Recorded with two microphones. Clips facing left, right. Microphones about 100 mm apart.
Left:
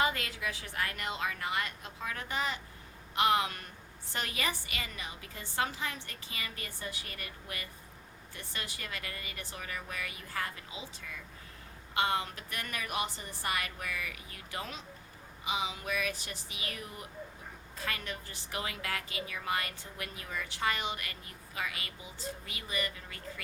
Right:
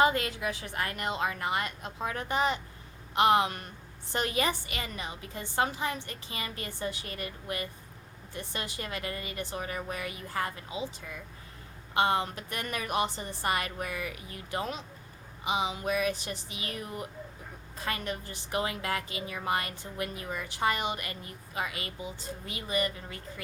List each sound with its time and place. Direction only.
0.0 s a woman's voice: 25° right (ahead or behind)
11.9 s a woman's voice: 25° right (ahead or behind)